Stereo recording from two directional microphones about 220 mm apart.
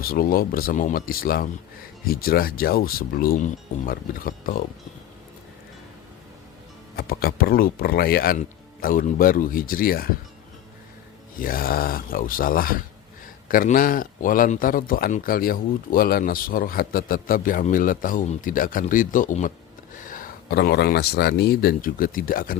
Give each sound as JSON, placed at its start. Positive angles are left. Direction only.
{"t": 0.0, "sound": "speech", "side_deg": 40}
{"t": 6.9, "sound": "speech", "side_deg": 45}
{"t": 11.3, "sound": "speech", "side_deg": 40}